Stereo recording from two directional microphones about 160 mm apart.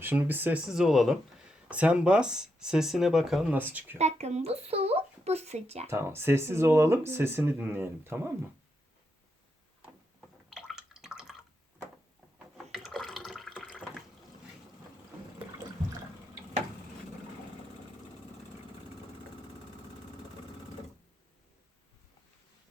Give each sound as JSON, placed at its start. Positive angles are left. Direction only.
{"t": 0.0, "sound": "speech", "side_deg": -10}
{"t": 3.9, "sound": "speech", "side_deg": -45}
{"t": 5.9, "sound": "speech", "side_deg": -15}
{"t": 10.7, "sound": "drip", "side_deg": -5}
{"t": 12.7, "sound": "water", "side_deg": 0}